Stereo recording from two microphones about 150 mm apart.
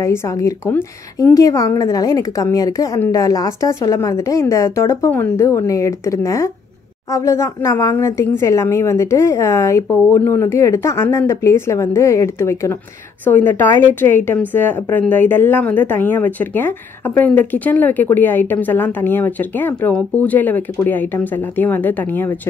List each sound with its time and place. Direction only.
0.0 s a woman's voice: 20° left (ahead or behind)